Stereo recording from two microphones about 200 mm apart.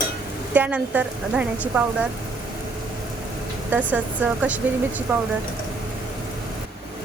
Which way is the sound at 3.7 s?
10° right (ahead or behind).